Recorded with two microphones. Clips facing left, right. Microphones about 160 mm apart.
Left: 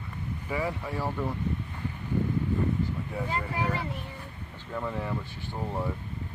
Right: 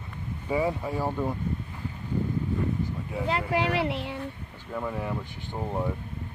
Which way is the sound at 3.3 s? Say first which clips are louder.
Right 6 dB; 85° right.